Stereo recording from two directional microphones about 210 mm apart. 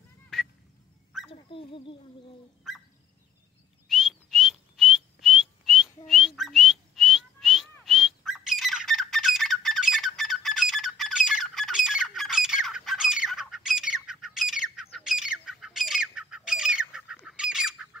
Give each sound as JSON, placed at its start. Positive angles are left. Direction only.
{"t": 0.3, "sound": "fowl", "side_deg": 0}
{"t": 1.3, "sound": "speech", "side_deg": 25}
{"t": 3.9, "sound": "whistling", "side_deg": 0}
{"t": 7.8, "sound": "squawk", "side_deg": 0}